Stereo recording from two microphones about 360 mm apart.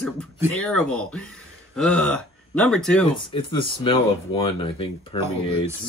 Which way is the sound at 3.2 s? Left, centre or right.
Centre.